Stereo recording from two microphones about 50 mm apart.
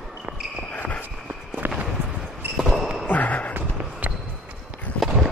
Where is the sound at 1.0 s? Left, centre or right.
Right.